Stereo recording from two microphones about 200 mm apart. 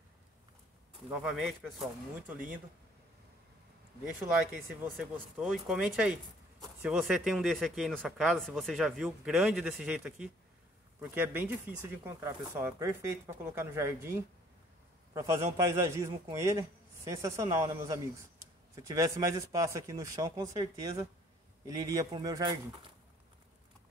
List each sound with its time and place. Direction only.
1.1 s speech: centre (ahead or behind)
4.9 s a man's voice: centre (ahead or behind); by 22.6 s 20° right (ahead or behind)